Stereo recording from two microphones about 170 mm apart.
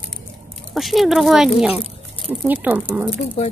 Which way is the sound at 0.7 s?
Centre (ahead or behind).